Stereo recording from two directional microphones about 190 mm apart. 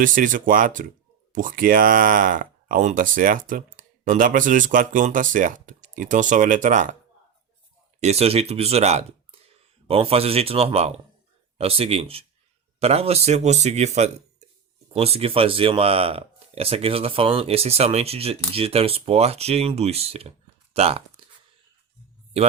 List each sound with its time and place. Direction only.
0.0 s speech: 45° right (ahead or behind)
8.0 s speech: 30° right (ahead or behind)